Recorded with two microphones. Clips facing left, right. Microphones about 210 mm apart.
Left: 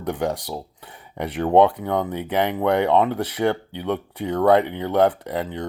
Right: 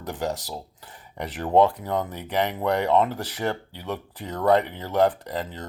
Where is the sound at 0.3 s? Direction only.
60° left (ahead or behind).